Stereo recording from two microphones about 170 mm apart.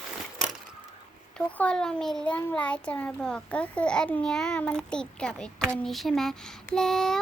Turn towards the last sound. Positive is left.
turn(degrees=5)  # may be behind; listen again after turning